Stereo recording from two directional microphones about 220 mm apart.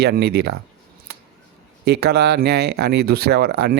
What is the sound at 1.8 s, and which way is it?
Speech, 45° right (ahead or behind).